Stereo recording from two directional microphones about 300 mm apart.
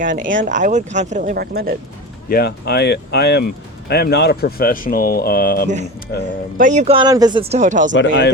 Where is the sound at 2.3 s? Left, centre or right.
Left.